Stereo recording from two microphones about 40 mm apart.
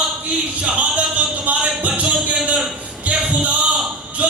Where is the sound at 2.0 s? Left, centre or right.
Right.